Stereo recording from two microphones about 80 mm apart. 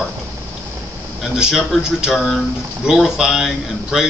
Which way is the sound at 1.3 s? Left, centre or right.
Centre.